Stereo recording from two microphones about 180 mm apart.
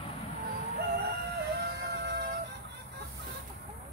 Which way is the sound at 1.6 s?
65° right (ahead or behind).